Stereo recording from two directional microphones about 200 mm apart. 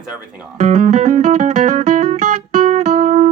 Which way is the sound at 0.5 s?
35° right (ahead or behind).